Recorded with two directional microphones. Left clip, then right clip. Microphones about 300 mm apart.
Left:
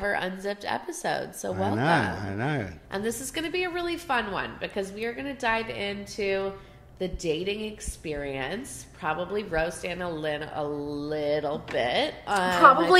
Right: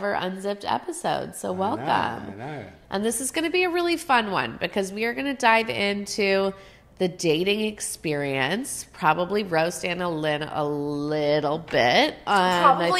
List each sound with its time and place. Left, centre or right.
0.0 s a woman's voice: right
2.3 s speech: left
2.9 s a woman's voice: right